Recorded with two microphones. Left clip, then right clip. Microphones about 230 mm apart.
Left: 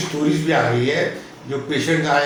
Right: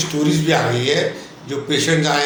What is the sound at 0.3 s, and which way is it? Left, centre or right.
A man's voice, right.